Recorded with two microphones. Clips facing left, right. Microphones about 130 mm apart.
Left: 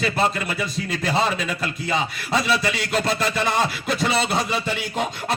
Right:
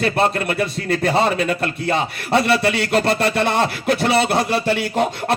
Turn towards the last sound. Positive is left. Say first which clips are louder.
# right 6 dB
turn(degrees=-60)  # may be behind; listen again after turning